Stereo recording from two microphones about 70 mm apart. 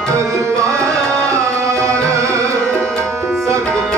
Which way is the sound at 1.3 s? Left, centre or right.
Right.